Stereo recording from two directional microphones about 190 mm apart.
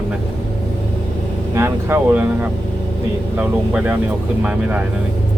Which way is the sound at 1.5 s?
10° right (ahead or behind).